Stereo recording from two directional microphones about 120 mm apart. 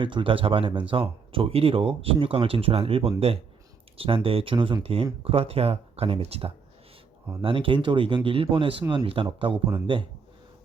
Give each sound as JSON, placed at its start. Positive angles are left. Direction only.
{"t": 0.0, "sound": "speech", "side_deg": -45}